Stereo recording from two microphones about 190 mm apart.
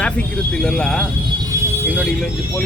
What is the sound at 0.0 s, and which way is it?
Speech, 5° left (ahead or behind).